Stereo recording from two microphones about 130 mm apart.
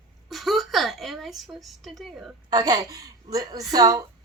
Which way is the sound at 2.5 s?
30° right (ahead or behind).